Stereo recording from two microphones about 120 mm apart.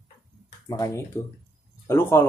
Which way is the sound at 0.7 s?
25° left (ahead or behind).